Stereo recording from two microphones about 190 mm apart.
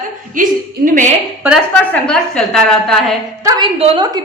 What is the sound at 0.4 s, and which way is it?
Speech, 45° right (ahead or behind).